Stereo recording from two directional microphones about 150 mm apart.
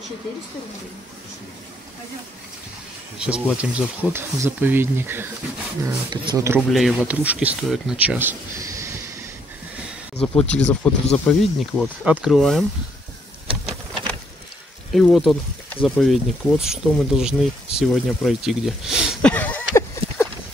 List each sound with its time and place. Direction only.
3.2 s speech: 5° right (ahead or behind)
6.7 s speech: centre (ahead or behind)
8.5 s train: 20° right (ahead or behind)
10.1 s speech: 5° left (ahead or behind)
14.9 s speech: centre (ahead or behind)
19.2 s a sound: 10° left (ahead or behind)